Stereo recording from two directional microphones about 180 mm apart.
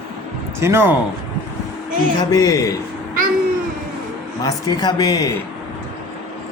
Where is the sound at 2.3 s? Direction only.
20° left (ahead or behind).